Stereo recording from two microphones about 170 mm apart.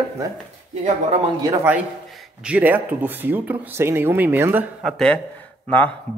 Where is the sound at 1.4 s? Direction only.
20° right (ahead or behind).